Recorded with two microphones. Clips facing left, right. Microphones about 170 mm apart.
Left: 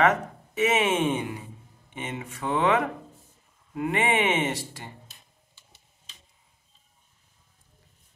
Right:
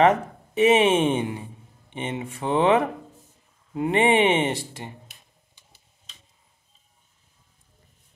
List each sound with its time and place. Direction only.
0.0 s speech: 30° right (ahead or behind)